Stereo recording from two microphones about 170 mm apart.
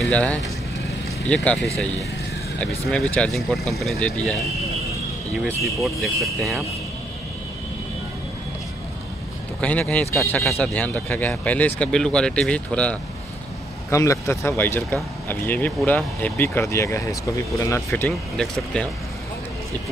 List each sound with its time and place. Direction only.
0.0 s speech: 5° left (ahead or behind)
2.9 s speech: 5° left (ahead or behind)
5.6 s speech: centre (ahead or behind)
9.6 s speech: 10° left (ahead or behind)
13.8 s speech: 15° left (ahead or behind)
18.4 s speech: 5° left (ahead or behind)